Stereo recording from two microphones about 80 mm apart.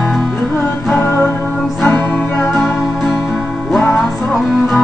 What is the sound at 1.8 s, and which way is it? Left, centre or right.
Music, left.